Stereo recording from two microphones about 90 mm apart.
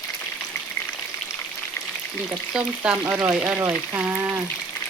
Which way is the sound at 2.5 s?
10° right (ahead or behind).